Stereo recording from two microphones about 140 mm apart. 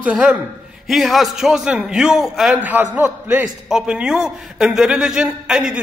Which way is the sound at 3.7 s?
5° right (ahead or behind).